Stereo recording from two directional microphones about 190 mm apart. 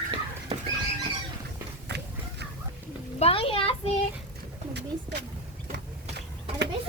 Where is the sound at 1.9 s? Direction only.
65° right (ahead or behind).